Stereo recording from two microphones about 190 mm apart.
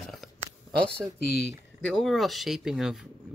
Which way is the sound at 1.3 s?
60° left (ahead or behind).